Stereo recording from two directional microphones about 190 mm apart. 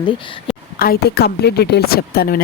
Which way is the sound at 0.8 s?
55° left (ahead or behind).